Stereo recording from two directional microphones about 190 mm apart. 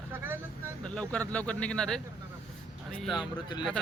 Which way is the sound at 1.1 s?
5° left (ahead or behind).